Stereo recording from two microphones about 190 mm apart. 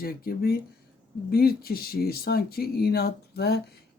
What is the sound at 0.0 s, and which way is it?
A woman's voice, 50° left (ahead or behind).